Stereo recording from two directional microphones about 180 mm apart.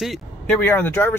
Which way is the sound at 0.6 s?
10° left (ahead or behind).